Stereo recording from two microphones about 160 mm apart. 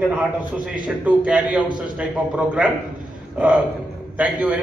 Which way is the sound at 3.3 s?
10° right (ahead or behind).